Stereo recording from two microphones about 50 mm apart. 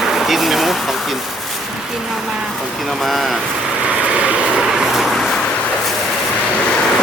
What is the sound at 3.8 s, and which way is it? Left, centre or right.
Vehicle, right.